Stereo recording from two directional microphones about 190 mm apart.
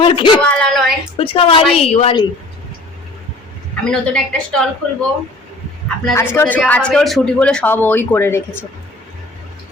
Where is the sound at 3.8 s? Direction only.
5° left (ahead or behind).